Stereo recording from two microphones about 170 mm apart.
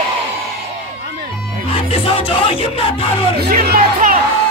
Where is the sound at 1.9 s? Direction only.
35° left (ahead or behind).